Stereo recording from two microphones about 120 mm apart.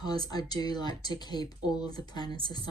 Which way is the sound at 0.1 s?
35° left (ahead or behind).